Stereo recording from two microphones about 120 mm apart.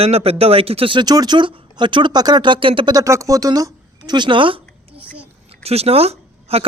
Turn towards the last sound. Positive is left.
turn(degrees=-55)  # may be behind; listen again after turning